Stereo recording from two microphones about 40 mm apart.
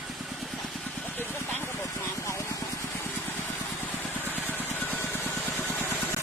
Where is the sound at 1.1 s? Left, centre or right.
Left.